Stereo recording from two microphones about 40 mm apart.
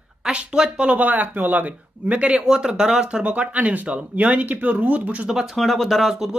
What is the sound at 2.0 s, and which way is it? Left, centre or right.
Speech, right.